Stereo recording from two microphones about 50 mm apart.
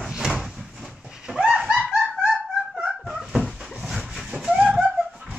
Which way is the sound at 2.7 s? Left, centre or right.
Right.